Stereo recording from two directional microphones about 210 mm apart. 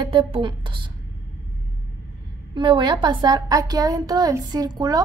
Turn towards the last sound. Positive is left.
turn(degrees=-20)  # may be behind; listen again after turning